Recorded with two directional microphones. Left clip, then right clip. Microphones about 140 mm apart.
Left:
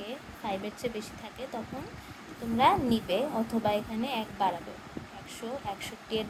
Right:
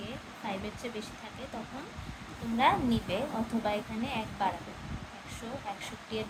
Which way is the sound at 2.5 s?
55° left (ahead or behind).